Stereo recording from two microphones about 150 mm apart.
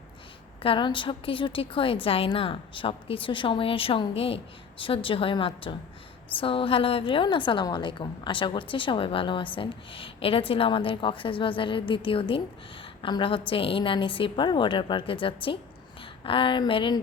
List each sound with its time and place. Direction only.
0.6 s a woman's voice: 35° left (ahead or behind)